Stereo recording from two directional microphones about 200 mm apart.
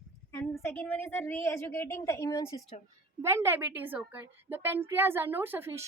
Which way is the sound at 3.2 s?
15° right (ahead or behind).